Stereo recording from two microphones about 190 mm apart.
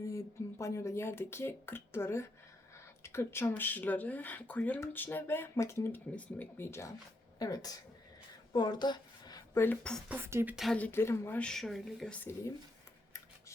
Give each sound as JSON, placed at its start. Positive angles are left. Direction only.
{"t": 0.6, "sound": "a woman's voice", "side_deg": 15}
{"t": 10.1, "sound": "speech", "side_deg": -15}
{"t": 10.5, "sound": "speech", "side_deg": 0}